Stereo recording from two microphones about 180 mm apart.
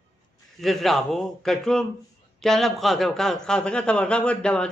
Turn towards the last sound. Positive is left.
turn(degrees=5)  # may be behind; listen again after turning